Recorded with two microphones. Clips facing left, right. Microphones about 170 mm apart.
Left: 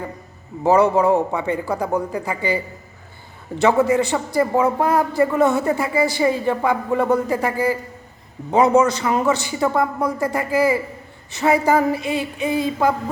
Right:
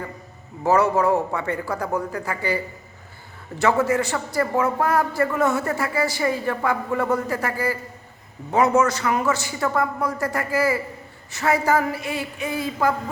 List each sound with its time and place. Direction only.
0.6 s a man's voice: 15° left (ahead or behind)
3.6 s a man's voice: 20° left (ahead or behind)